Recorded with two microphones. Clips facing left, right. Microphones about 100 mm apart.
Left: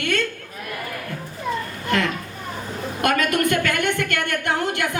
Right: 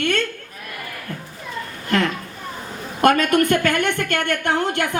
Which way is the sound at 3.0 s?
35° right (ahead or behind).